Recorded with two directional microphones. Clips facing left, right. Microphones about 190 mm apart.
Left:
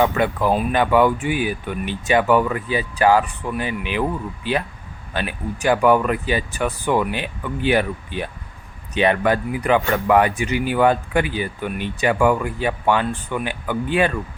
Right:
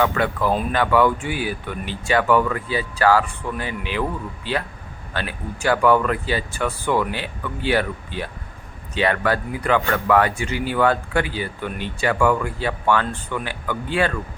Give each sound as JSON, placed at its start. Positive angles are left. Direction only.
{"t": 0.0, "sound": "speech", "side_deg": 20}